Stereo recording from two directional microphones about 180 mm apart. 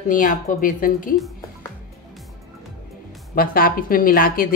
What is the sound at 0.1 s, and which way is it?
Speech, 45° left (ahead or behind).